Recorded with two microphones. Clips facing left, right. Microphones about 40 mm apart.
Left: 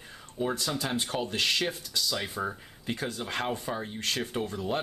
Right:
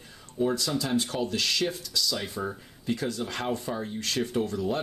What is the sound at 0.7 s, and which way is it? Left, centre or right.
Speech, left.